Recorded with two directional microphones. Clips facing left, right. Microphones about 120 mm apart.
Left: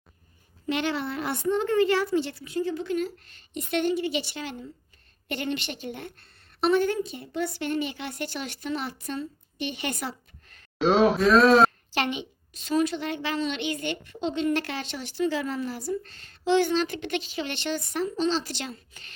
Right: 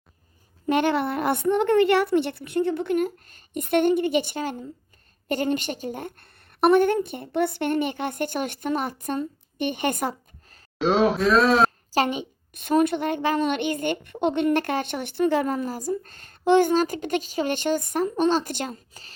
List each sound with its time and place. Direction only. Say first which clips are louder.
0.7 s a woman's voice: right 6 dB; 50° right (ahead or behind)
10.8 s speech: even; centre (ahead or behind)
11.9 s a woman's voice: right 5 dB; 40° right (ahead or behind)